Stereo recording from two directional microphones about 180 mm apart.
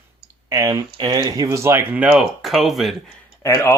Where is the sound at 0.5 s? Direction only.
15° right (ahead or behind); by 2.9 s centre (ahead or behind).